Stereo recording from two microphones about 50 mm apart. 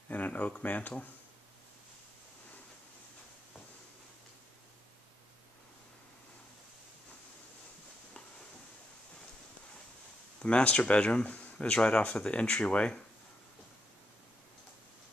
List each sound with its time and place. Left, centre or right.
0.1 s speech: left
10.4 s speech: left
11.5 s speech: centre